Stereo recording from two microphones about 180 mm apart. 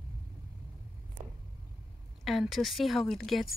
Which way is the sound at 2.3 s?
Centre (ahead or behind).